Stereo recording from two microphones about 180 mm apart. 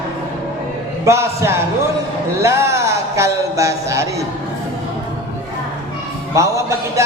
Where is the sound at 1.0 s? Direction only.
15° right (ahead or behind).